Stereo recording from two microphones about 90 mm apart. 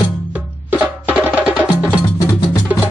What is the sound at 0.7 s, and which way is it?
Music, 20° right (ahead or behind).